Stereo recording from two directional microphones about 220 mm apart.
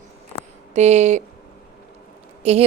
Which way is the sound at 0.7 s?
30° right (ahead or behind).